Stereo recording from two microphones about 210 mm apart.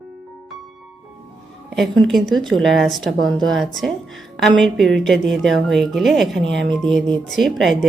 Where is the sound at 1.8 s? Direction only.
Centre (ahead or behind).